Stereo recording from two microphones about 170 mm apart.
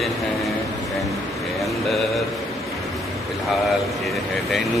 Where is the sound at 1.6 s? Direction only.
Centre (ahead or behind).